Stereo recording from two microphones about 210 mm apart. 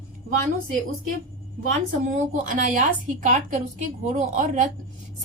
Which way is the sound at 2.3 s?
40° right (ahead or behind).